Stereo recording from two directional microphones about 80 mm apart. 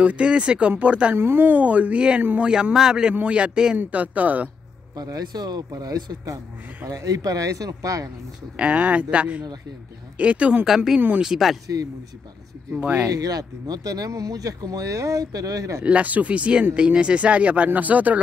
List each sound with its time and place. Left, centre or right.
0.0 s speech: centre
1.1 s speech: right
4.9 s speech: right
8.5 s speech: centre
11.0 s speech: centre
11.2 s speech: centre
11.6 s speech: right
12.7 s speech: centre
13.1 s speech: right
15.8 s speech: centre